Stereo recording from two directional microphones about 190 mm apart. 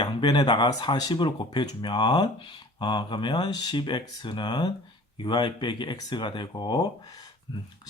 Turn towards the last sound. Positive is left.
turn(degrees=25)  # may be behind; listen again after turning